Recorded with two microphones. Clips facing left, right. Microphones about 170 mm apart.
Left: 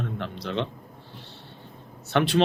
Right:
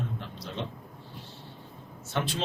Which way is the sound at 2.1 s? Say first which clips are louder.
Left 8 dB; 70° left (ahead or behind).